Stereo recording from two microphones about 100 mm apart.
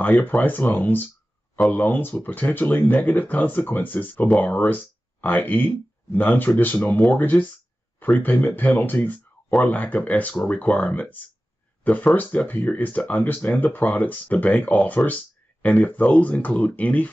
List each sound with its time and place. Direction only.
0.0 s speech: 15° left (ahead or behind)